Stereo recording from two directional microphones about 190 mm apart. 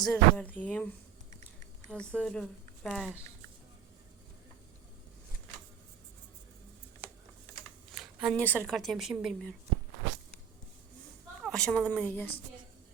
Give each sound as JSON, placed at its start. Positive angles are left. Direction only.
{"t": 0.0, "sound": "speech", "side_deg": 5}
{"t": 1.9, "sound": "speech", "side_deg": 5}
{"t": 7.9, "sound": "speech", "side_deg": 0}
{"t": 11.4, "sound": "speech", "side_deg": 5}